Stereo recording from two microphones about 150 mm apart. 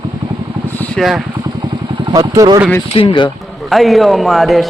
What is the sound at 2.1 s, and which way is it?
Speech, 30° right (ahead or behind).